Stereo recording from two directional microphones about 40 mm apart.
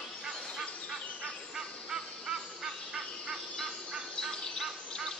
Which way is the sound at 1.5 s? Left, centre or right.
Centre.